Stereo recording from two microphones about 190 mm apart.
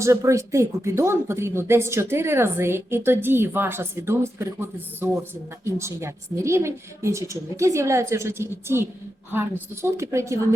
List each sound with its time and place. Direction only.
0.0 s speech: 15° right (ahead or behind)